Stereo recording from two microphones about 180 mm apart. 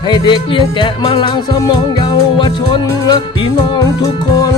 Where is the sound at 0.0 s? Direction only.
25° left (ahead or behind).